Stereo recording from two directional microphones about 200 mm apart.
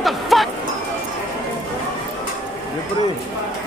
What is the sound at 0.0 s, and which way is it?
Music, centre (ahead or behind).